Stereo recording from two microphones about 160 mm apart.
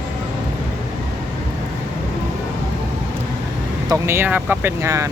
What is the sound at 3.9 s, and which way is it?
Speech, 15° right (ahead or behind).